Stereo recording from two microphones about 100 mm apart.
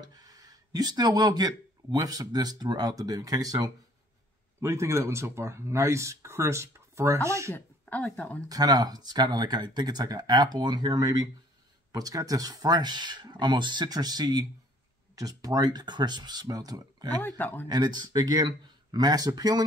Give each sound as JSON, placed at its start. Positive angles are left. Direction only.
{"t": 0.0, "sound": "speech", "side_deg": -40}
{"t": 7.8, "sound": "speech", "side_deg": 10}
{"t": 8.5, "sound": "speech", "side_deg": -40}
{"t": 17.2, "sound": "speech", "side_deg": 20}
{"t": 17.6, "sound": "speech", "side_deg": -45}